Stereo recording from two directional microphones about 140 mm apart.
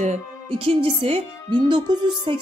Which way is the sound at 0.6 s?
45° right (ahead or behind).